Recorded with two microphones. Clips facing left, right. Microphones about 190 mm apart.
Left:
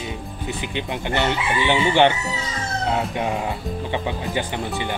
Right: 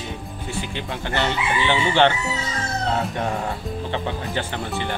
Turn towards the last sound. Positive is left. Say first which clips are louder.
# left 1 dB
turn(degrees=15)  # may be behind; listen again after turning